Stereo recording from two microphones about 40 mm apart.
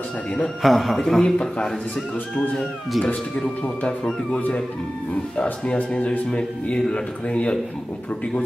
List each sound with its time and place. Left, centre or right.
0.6 s a man's voice: centre
1.2 s speech: centre
3.6 s speech: left
5.4 s speech: left